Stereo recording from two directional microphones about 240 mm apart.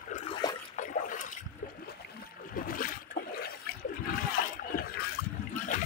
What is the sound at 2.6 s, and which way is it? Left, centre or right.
Trickle, left.